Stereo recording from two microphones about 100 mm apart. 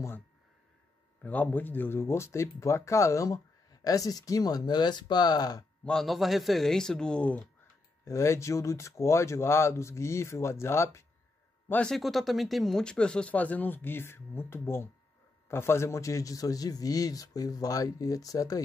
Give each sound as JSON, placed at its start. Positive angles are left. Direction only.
{"t": 1.2, "sound": "a man's voice", "side_deg": 15}
{"t": 5.9, "sound": "speech", "side_deg": 0}
{"t": 8.0, "sound": "speech", "side_deg": 30}
{"t": 11.7, "sound": "a man's voice", "side_deg": 5}